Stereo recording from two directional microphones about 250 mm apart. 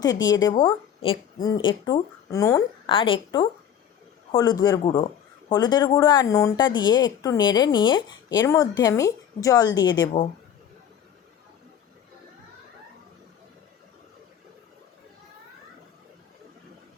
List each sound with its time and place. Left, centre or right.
0.0 s speech: centre
10.1 s speech: left